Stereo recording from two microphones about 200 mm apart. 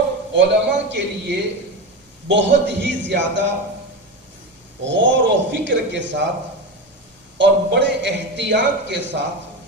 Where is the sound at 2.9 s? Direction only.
65° right (ahead or behind).